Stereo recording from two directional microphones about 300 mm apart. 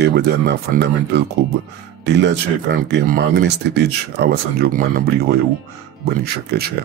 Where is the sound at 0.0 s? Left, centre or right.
Right.